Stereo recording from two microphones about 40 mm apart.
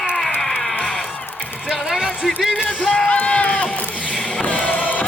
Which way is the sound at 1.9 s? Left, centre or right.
Centre.